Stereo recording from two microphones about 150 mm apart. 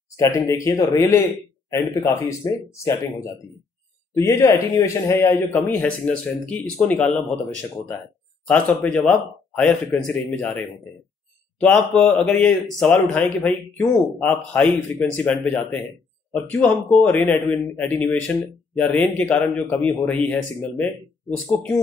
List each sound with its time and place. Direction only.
0.1 s speech: 20° left (ahead or behind)
8.5 s speech: 10° left (ahead or behind)
11.9 s speech: 5° left (ahead or behind)